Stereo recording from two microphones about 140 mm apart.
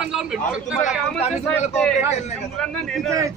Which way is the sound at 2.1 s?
50° left (ahead or behind).